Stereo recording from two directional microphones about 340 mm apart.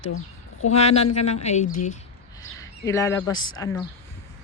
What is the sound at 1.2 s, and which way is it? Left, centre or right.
Speech, centre.